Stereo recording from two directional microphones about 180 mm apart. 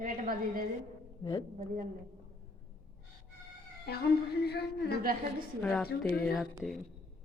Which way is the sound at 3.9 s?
65° left (ahead or behind).